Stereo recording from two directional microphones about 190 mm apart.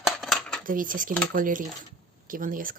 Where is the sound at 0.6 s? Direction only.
45° right (ahead or behind).